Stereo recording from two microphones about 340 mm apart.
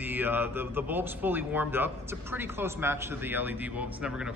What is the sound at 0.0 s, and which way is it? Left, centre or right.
A man's voice, centre.